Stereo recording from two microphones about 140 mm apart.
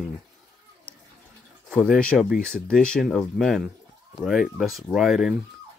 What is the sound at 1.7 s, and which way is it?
Speech, 5° left (ahead or behind).